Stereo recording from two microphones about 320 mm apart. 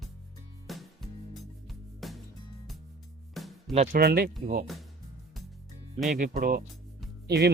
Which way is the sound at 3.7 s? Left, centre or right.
Right.